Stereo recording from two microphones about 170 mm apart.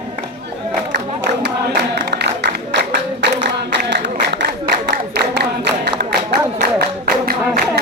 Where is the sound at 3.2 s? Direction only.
90° right.